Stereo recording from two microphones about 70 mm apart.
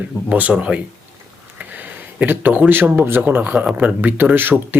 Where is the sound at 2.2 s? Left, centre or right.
Right.